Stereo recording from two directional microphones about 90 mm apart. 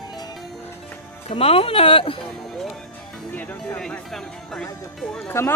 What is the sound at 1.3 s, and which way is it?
Speech, 90° left.